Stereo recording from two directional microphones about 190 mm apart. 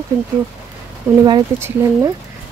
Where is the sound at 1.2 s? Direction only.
15° right (ahead or behind).